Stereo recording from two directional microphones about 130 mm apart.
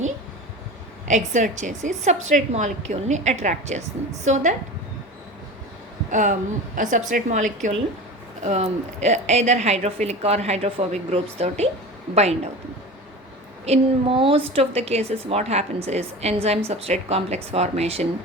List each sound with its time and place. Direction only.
1.0 s a woman's voice: 70° right (ahead or behind)
6.1 s a woman's voice: 75° right (ahead or behind)
8.4 s a woman's voice: 60° right (ahead or behind)
13.7 s a woman's voice: 45° right (ahead or behind)